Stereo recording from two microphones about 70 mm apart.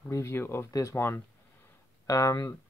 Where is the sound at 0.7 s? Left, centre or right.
Left.